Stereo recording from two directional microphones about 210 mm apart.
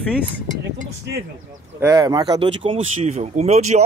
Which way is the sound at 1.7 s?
15° right (ahead or behind).